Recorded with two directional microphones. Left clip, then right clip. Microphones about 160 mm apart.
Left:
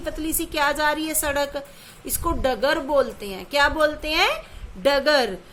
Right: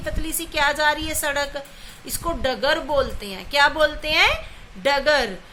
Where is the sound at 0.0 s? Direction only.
55° left (ahead or behind).